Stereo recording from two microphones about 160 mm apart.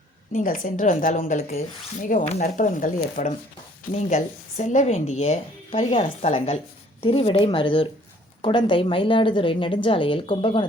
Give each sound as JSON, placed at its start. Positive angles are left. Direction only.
{"t": 0.3, "sound": "a woman's voice", "side_deg": 60}